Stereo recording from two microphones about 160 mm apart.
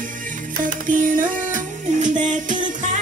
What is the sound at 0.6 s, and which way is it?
Music, 60° right (ahead or behind).